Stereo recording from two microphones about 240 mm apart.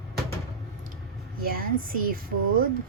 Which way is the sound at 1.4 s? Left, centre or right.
Right.